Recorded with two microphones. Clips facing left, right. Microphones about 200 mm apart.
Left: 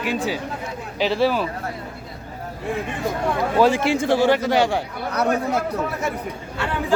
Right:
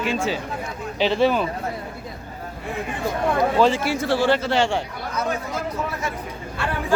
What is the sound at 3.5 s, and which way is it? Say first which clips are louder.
A man's voice: left 2 dB; 10° left (ahead or behind).